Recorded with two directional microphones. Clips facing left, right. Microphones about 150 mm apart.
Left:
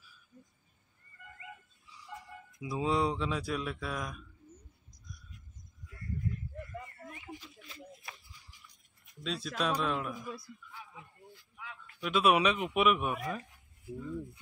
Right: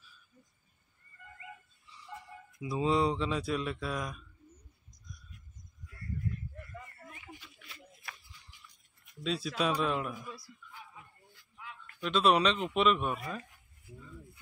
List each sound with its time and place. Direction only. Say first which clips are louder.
2.6 s speech: right 2 dB; centre (ahead or behind)
7.3 s a sound: left 4 dB; 35° left (ahead or behind)
9.2 s speech: right 2 dB; centre (ahead or behind)
11.8 s speech: even; 5° left (ahead or behind)